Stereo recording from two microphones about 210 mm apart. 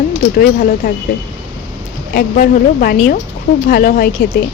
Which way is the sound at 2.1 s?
45° left (ahead or behind).